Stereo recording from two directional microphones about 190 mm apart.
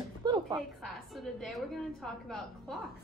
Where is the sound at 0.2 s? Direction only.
20° right (ahead or behind).